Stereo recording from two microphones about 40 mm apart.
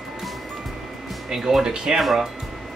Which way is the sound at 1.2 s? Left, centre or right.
Centre.